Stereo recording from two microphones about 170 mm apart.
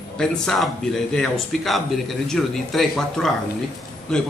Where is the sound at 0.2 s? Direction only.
5° left (ahead or behind).